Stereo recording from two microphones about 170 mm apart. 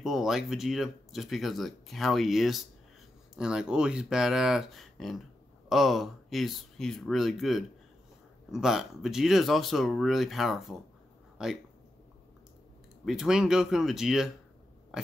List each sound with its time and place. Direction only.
0.0 s speech: centre (ahead or behind)
13.0 s speech: 5° right (ahead or behind)